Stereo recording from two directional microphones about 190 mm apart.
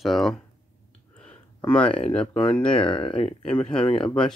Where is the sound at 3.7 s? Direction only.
25° left (ahead or behind).